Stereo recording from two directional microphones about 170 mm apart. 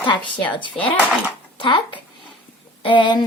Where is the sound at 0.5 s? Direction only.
30° left (ahead or behind).